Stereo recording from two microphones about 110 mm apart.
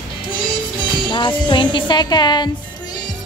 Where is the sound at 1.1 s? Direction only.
45° left (ahead or behind).